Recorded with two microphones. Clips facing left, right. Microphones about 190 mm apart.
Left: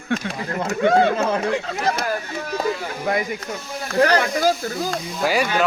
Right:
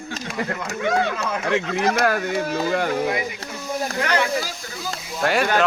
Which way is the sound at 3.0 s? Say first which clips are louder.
Left 2 dB; 50° left (ahead or behind).